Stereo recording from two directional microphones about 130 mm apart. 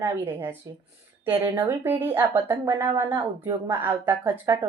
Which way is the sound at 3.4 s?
15° right (ahead or behind).